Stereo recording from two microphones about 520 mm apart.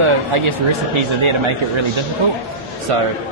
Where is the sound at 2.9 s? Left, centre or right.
Right.